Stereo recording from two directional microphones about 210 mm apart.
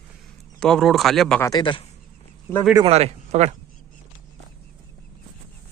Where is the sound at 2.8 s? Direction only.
30° right (ahead or behind).